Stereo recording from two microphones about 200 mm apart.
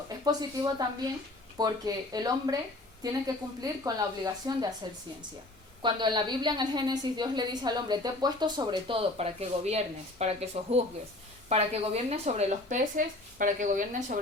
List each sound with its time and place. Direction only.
0.3 s a woman's voice: 20° right (ahead or behind)
5.8 s a woman's voice: 20° right (ahead or behind); by 14.2 s 40° right (ahead or behind)